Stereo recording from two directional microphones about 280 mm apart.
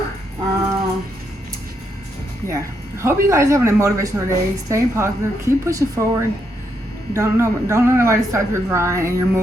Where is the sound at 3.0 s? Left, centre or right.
Centre.